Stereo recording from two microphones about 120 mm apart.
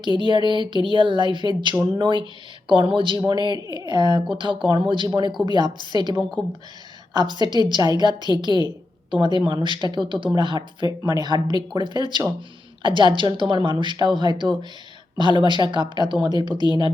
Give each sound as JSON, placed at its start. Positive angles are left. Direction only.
{"t": 0.2, "sound": "speech", "side_deg": -40}